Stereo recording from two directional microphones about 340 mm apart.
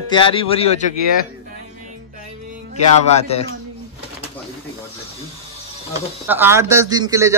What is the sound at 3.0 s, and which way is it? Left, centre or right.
Speech, centre.